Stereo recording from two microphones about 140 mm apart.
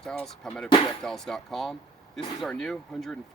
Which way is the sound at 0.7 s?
40° left (ahead or behind).